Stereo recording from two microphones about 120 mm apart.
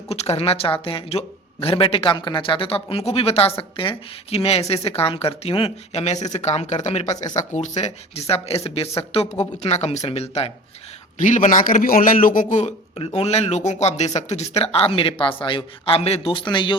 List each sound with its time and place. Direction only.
0.1 s speech: 60° left (ahead or behind)
5.9 s speech: 65° left (ahead or behind)
9.3 s speech: 70° left (ahead or behind)
11.2 s a man's voice: 90° left
13.1 s speech: 65° left (ahead or behind); by 16.7 s 40° left (ahead or behind)